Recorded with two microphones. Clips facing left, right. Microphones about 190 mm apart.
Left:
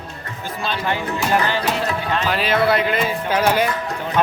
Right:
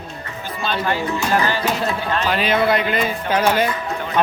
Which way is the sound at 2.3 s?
Centre (ahead or behind).